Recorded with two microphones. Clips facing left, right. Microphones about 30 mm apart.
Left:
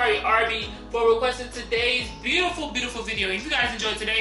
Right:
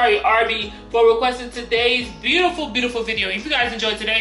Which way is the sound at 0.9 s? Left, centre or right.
Right.